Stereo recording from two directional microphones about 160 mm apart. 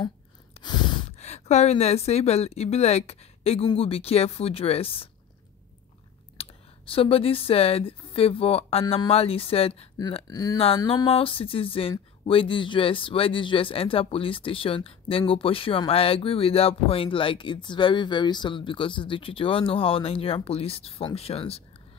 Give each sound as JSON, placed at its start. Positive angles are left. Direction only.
{"t": 0.6, "sound": "sigh", "side_deg": 40}
{"t": 1.1, "sound": "a woman's voice", "side_deg": 45}
{"t": 6.3, "sound": "speech", "side_deg": 35}
{"t": 10.2, "sound": "speech", "side_deg": 25}
{"t": 10.9, "sound": "speech", "side_deg": 35}